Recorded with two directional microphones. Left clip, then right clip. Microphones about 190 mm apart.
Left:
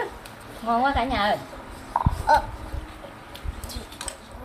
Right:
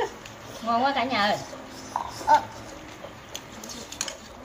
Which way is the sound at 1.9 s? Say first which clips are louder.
Left 5 dB; 15° left (ahead or behind).